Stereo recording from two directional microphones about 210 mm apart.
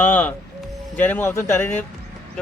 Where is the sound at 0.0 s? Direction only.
10° left (ahead or behind).